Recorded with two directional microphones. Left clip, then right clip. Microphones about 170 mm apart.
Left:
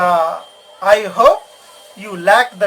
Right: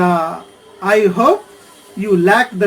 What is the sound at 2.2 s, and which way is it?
Speech, 30° left (ahead or behind).